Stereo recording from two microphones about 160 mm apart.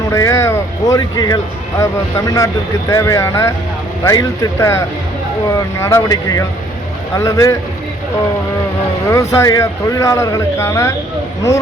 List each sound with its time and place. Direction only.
0.1 s speech: 15° left (ahead or behind)
9.1 s speech: 20° left (ahead or behind)